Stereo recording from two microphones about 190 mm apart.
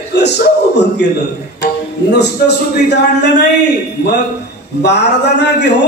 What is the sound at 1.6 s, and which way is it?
Music, 65° left (ahead or behind).